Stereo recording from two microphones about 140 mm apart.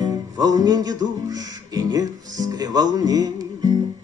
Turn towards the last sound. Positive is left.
turn(degrees=-25)  # may be behind; listen again after turning